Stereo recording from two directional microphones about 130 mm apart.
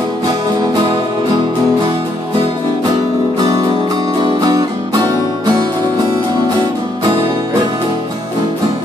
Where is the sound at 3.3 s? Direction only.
30° right (ahead or behind).